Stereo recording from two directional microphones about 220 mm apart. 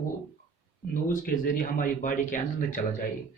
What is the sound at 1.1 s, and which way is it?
Speech, 40° left (ahead or behind).